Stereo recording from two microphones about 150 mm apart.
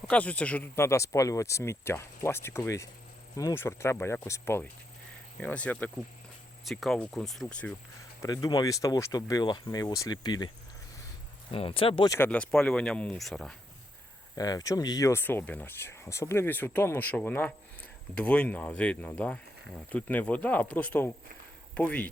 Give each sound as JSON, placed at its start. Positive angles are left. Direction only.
{"t": 0.1, "sound": "speech", "side_deg": 10}
{"t": 8.2, "sound": "speech", "side_deg": 25}
{"t": 11.5, "sound": "speech", "side_deg": 40}
{"t": 12.0, "sound": "speech", "side_deg": 20}
{"t": 12.3, "sound": "speech", "side_deg": 5}
{"t": 14.3, "sound": "speech", "side_deg": 25}